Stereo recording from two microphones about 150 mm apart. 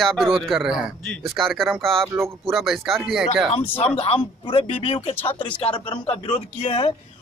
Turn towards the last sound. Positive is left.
turn(degrees=40)  # may be behind; listen again after turning